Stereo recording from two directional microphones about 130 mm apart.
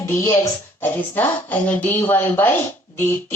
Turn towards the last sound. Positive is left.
turn(degrees=15)  # may be behind; listen again after turning